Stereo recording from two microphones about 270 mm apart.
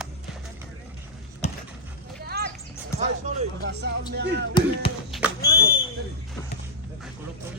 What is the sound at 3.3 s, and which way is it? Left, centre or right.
Speech, right.